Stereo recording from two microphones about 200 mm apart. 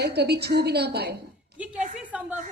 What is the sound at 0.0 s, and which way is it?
A woman's voice, 55° right (ahead or behind).